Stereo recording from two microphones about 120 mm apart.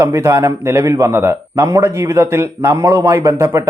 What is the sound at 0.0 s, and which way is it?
A man's voice, 25° right (ahead or behind).